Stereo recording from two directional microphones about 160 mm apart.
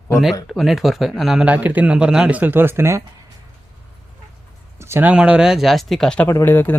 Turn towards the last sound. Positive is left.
turn(degrees=15)  # may be behind; listen again after turning